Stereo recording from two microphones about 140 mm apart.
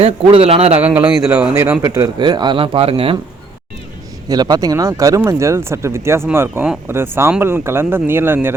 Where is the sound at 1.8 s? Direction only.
20° right (ahead or behind); by 3.1 s 40° right (ahead or behind).